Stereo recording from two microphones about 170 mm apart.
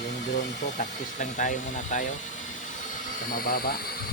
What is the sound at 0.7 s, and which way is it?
Speech, 50° left (ahead or behind).